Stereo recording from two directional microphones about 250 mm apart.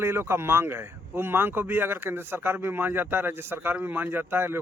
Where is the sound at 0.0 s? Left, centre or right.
Centre.